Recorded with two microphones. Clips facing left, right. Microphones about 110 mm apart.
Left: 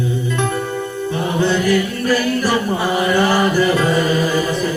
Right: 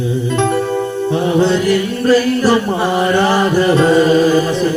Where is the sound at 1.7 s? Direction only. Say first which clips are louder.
Right 4 dB; 30° right (ahead or behind).